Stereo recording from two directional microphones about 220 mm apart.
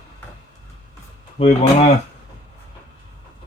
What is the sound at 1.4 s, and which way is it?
Speech, 30° left (ahead or behind).